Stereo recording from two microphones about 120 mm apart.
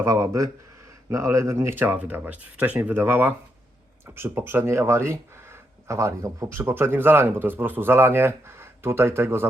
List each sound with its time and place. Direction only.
0.0 s speech: 25° right (ahead or behind)